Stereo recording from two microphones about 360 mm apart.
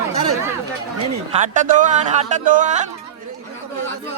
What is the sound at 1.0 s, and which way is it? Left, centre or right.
Speech, centre.